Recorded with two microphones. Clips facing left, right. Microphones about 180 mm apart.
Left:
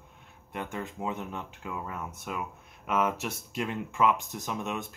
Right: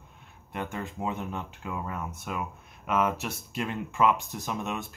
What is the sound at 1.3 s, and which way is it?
Speech, 5° left (ahead or behind).